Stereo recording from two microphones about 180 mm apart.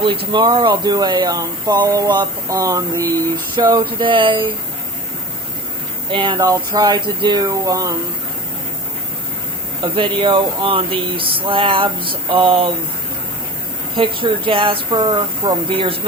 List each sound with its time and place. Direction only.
0.0 s speech: 25° right (ahead or behind)
6.1 s speech: 25° right (ahead or behind)
9.8 s speech: 25° right (ahead or behind)
13.9 s speech: 30° right (ahead or behind)